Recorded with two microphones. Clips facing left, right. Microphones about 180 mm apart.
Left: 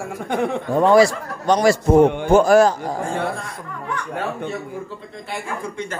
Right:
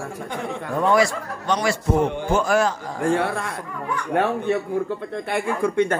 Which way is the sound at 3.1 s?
70° right (ahead or behind).